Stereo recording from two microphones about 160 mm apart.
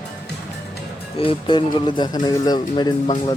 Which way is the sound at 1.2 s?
30° left (ahead or behind).